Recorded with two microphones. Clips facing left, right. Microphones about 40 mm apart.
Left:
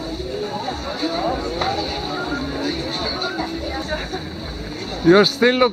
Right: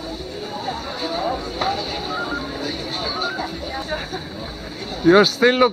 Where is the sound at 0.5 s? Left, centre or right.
Centre.